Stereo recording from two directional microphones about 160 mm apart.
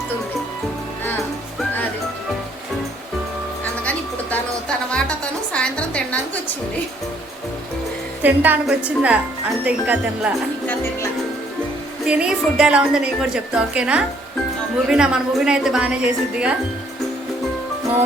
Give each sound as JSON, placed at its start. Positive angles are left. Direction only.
{"t": 4.9, "sound": "music", "side_deg": 5}
{"t": 5.5, "sound": "a sound", "side_deg": 5}
{"t": 8.2, "sound": "speech", "side_deg": -10}
{"t": 12.0, "sound": "a woman's voice", "side_deg": -5}